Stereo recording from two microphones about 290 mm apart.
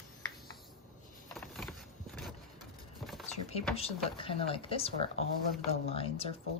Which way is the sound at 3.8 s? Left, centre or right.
Centre.